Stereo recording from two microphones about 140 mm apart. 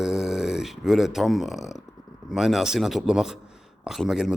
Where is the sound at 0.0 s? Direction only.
5° right (ahead or behind).